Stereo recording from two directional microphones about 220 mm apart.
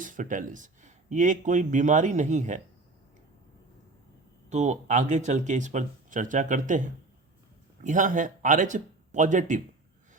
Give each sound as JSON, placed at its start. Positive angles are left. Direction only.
{"t": 0.0, "sound": "speech", "side_deg": -35}
{"t": 4.4, "sound": "speech", "side_deg": -30}